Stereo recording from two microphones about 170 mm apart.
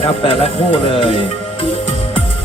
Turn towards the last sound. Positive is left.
turn(degrees=35)  # may be behind; listen again after turning